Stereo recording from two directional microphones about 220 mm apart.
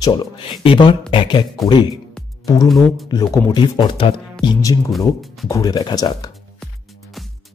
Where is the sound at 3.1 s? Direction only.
20° left (ahead or behind).